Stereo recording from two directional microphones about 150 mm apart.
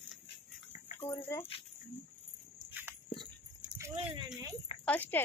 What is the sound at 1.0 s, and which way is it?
Speech, 15° left (ahead or behind).